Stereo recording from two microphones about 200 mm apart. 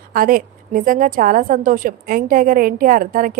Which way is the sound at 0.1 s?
45° right (ahead or behind).